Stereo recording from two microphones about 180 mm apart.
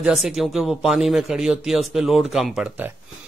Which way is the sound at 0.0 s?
Centre (ahead or behind).